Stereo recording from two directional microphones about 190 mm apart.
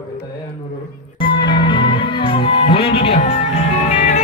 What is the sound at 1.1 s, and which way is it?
Music, 25° left (ahead or behind).